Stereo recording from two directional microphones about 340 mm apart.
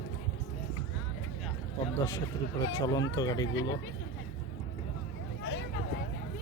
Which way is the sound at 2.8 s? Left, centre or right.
Centre.